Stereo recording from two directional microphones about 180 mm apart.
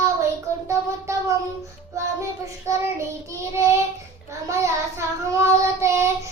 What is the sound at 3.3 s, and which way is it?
Child singing, 15° right (ahead or behind).